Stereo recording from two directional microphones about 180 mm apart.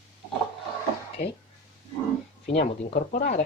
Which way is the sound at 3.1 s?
45° left (ahead or behind).